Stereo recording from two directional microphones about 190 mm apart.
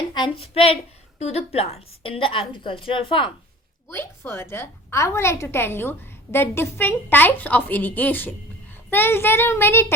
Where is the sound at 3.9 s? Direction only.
15° left (ahead or behind).